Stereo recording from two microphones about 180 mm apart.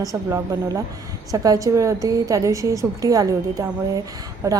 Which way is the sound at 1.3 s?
20° right (ahead or behind).